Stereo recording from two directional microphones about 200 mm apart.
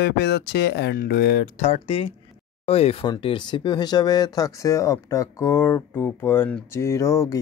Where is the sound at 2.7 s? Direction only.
30° left (ahead or behind).